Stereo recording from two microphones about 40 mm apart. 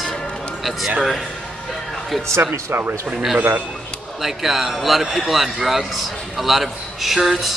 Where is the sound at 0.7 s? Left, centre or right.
Centre.